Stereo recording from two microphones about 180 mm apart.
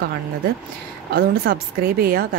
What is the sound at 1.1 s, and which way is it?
Speech, 55° right (ahead or behind).